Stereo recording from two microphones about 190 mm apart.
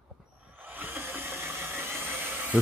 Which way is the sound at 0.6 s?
10° right (ahead or behind).